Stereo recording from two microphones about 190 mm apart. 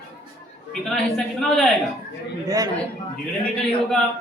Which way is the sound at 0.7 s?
Centre (ahead or behind).